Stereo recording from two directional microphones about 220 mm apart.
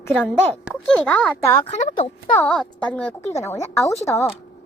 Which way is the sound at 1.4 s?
30° left (ahead or behind).